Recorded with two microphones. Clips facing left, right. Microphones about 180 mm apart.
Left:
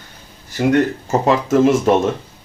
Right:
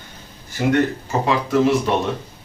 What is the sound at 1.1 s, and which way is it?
Speech, 45° left (ahead or behind).